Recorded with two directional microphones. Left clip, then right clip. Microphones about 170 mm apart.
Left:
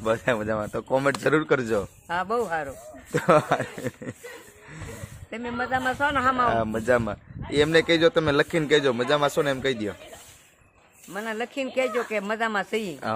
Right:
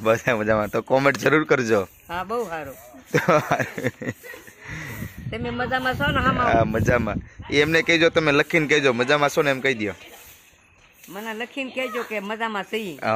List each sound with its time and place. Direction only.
0.0 s speech: 35° right (ahead or behind)
2.0 s speech: 15° left (ahead or behind)
3.1 s speech: 35° right (ahead or behind)
5.6 s a man's voice: 55° right (ahead or behind)
5.9 s speech: 30° right (ahead or behind)
11.1 s speech: 10° left (ahead or behind)